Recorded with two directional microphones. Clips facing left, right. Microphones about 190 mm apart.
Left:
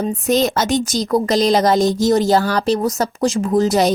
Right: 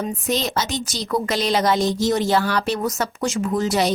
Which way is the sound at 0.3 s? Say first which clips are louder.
Left 8 dB; 45° left (ahead or behind).